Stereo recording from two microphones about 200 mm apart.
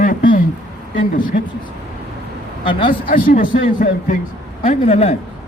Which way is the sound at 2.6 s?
25° left (ahead or behind).